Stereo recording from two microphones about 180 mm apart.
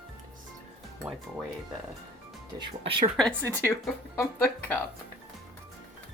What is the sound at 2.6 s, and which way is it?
Speech, 25° right (ahead or behind).